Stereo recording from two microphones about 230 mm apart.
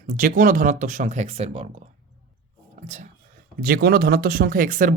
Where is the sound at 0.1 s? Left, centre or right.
Right.